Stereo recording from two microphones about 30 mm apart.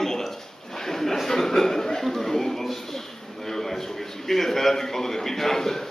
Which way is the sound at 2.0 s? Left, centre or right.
Centre.